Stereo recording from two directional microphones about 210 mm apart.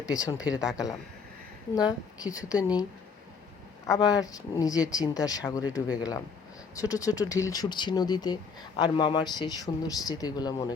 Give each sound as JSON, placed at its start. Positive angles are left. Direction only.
{"t": 0.0, "sound": "speech", "side_deg": 15}
{"t": 1.7, "sound": "speech", "side_deg": 20}
{"t": 3.8, "sound": "speech", "side_deg": 15}